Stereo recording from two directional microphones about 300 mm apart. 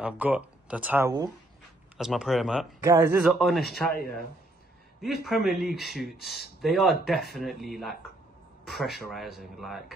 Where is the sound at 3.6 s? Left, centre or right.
Left.